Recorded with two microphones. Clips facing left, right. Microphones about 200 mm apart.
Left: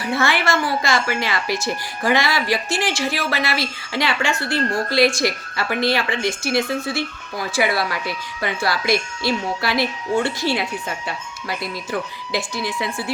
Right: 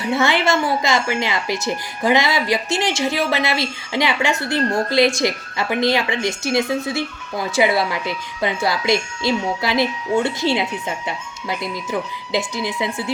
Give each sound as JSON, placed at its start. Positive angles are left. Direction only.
{"t": 0.0, "sound": "speech", "side_deg": -20}